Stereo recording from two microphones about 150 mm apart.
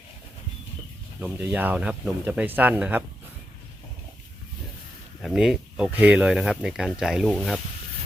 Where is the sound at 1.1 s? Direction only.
10° right (ahead or behind).